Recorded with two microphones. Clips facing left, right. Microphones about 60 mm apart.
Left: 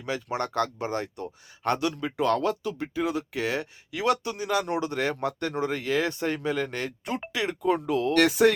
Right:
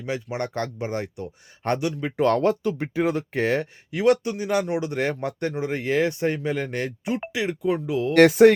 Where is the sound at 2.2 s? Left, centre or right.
Right.